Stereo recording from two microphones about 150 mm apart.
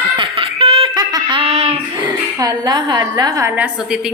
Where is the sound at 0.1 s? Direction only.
35° right (ahead or behind).